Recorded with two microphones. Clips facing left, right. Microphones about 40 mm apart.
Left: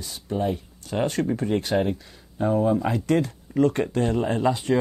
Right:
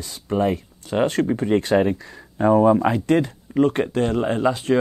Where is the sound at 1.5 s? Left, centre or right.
Right.